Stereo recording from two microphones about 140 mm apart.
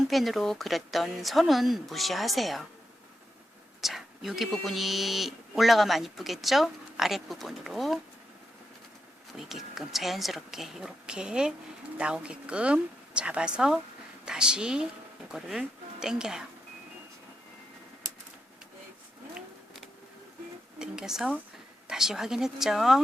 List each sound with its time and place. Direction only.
0.1 s speech: centre (ahead or behind)
3.8 s speech: centre (ahead or behind)
9.5 s speech: centre (ahead or behind)
20.7 s speech: 5° right (ahead or behind)